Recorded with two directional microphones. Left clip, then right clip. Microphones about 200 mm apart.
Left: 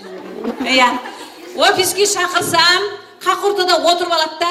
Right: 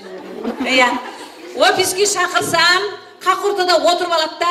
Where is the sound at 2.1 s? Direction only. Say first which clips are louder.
Even; 50° left (ahead or behind).